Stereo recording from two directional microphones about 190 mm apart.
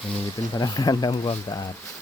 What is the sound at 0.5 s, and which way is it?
Speech, 20° left (ahead or behind).